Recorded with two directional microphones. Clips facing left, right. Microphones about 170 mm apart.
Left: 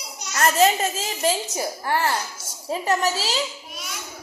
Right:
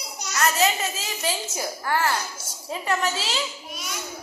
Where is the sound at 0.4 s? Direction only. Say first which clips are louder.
Left 4 dB; 45° left (ahead or behind).